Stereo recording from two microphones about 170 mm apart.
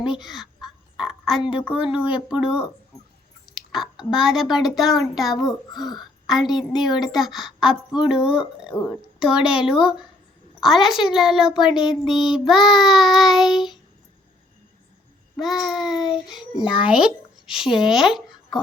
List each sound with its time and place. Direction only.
0.1 s speech: centre (ahead or behind)
2.3 s child singing: 5° right (ahead or behind)
3.7 s child singing: 5° right (ahead or behind)
5.3 s a child's voice: 25° left (ahead or behind)
6.0 s a sound: centre (ahead or behind)
6.6 s child singing: centre (ahead or behind)
15.4 s child singing: centre (ahead or behind)
17.4 s speech: 5° right (ahead or behind)